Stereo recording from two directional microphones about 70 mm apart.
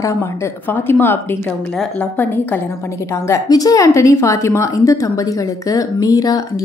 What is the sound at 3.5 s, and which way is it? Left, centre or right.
Speech, left.